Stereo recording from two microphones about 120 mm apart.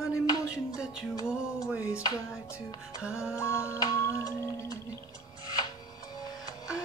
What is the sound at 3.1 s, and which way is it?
Music, 25° left (ahead or behind).